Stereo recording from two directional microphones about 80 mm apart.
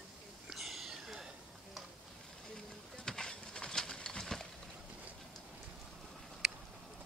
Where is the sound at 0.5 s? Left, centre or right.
Centre.